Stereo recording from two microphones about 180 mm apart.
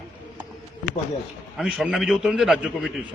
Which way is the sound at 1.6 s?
5° right (ahead or behind).